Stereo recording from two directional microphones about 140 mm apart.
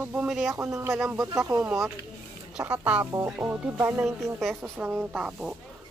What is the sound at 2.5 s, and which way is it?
Speech, 10° right (ahead or behind).